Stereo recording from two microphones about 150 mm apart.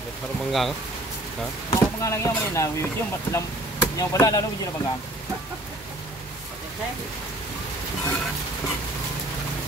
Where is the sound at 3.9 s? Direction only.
25° left (ahead or behind).